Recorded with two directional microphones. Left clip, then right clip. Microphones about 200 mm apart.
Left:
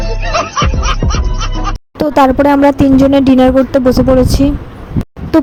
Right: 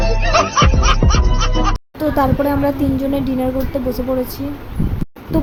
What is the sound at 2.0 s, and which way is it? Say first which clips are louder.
Speech: left 9 dB; 45° left (ahead or behind).